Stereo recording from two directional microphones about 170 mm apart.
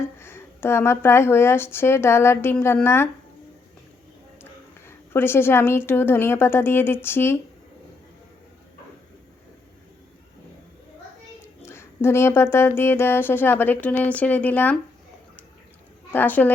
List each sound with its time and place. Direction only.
0.2 s speech: 15° left (ahead or behind)
4.9 s speech: 15° left (ahead or behind)
11.6 s speech: 15° left (ahead or behind)
16.1 s speech: 10° left (ahead or behind)